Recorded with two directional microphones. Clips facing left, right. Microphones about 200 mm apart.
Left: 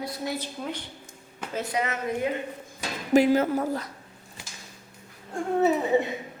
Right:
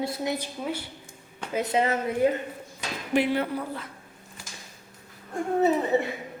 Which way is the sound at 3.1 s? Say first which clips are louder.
Left 5 dB; 40° left (ahead or behind).